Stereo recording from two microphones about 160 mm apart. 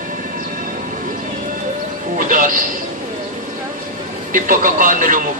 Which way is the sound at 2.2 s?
55° right (ahead or behind).